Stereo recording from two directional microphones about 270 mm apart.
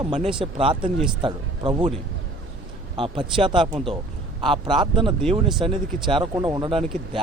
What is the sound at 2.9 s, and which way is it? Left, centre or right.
Speech, centre.